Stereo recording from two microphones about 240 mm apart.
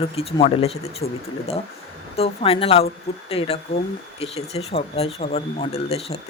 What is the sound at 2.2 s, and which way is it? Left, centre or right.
Speech, left.